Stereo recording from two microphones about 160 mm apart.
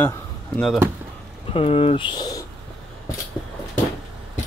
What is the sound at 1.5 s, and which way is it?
Speech, 35° left (ahead or behind).